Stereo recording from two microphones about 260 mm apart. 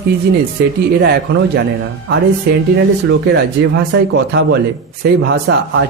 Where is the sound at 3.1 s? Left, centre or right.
Right.